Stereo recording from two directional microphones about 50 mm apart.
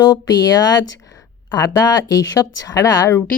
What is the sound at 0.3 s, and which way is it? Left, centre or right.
Speech, left.